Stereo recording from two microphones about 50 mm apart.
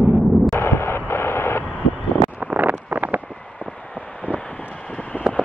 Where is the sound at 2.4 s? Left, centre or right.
Right.